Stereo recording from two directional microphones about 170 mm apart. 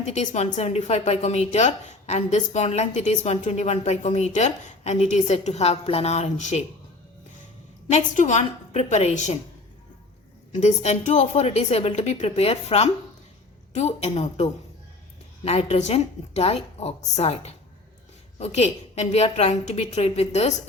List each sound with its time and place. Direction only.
0.0 s a woman's voice: 45° left (ahead or behind)
7.9 s a woman's voice: 45° left (ahead or behind)
10.5 s a woman's voice: 45° left (ahead or behind)
15.4 s a woman's voice: 40° left (ahead or behind)